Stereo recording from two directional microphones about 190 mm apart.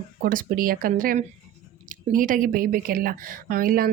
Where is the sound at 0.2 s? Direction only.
50° right (ahead or behind).